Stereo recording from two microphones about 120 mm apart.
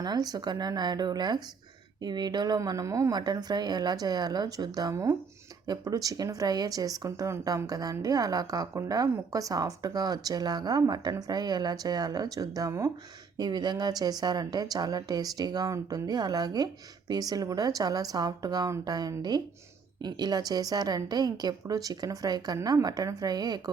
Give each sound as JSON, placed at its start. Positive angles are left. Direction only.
{"t": 0.0, "sound": "speech", "side_deg": -35}